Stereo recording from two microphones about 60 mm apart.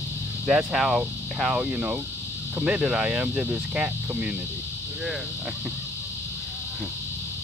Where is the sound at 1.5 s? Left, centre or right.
Centre.